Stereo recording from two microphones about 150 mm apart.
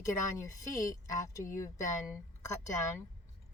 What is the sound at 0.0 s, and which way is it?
Speech, 20° left (ahead or behind).